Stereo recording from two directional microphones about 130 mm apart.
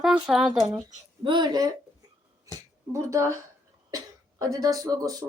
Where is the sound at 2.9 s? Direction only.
25° right (ahead or behind).